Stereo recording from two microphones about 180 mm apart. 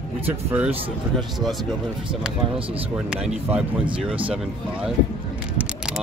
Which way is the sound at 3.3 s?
10° right (ahead or behind).